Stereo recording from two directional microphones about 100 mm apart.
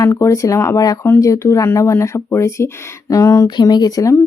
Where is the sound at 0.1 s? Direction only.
30° left (ahead or behind).